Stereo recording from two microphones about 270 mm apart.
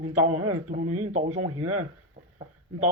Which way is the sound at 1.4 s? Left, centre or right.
Right.